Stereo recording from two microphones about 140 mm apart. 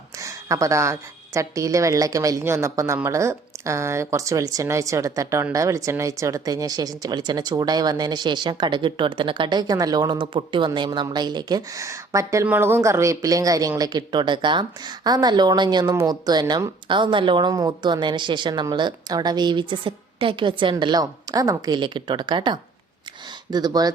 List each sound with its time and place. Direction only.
0.2 s a woman's voice: 20° right (ahead or behind)